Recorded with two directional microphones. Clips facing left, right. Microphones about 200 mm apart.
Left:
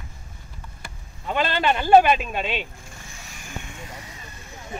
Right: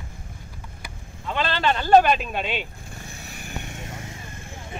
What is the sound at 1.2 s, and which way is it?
Speech, 10° left (ahead or behind).